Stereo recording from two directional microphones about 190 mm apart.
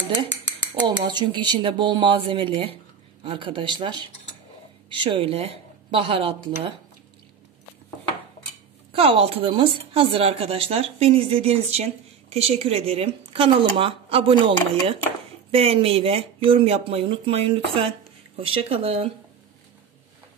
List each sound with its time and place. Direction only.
0.8 s speech: 25° right (ahead or behind)
8.9 s speech: 30° right (ahead or behind)